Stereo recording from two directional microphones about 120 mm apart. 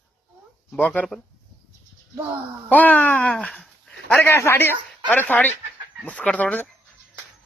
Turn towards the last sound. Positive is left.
turn(degrees=10)  # may be behind; listen again after turning